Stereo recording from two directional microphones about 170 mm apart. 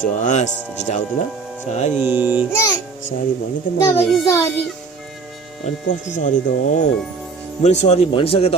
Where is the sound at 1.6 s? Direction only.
40° left (ahead or behind).